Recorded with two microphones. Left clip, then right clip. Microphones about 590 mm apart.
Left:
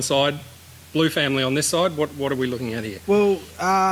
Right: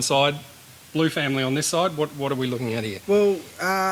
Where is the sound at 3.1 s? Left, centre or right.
Left.